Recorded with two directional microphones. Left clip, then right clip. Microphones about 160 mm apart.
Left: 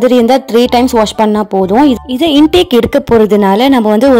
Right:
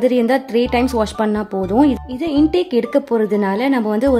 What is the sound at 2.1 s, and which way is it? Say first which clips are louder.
A woman's voice: left 9 dB; 55° left (ahead or behind).